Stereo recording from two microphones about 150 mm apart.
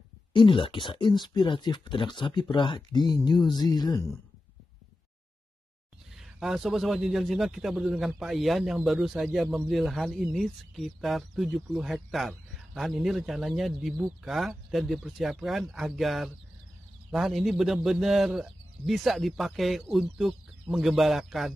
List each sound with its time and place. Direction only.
0.3 s speech: 35° left (ahead or behind)
6.1 s a man's voice: 5° right (ahead or behind)